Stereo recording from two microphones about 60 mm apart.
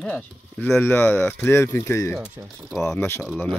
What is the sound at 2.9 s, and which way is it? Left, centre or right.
Speech, left.